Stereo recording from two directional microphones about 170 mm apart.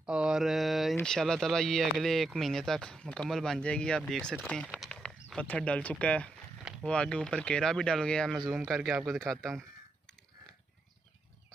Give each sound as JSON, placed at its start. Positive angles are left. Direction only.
{"t": 0.0, "sound": "mantra", "side_deg": -5}
{"t": 0.9, "sound": "speech", "side_deg": 5}